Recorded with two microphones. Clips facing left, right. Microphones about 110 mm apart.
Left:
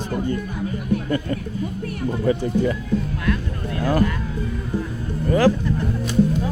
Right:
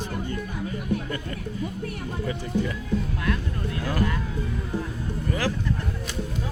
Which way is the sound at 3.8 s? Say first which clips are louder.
Left 10 dB; 40° left (ahead or behind).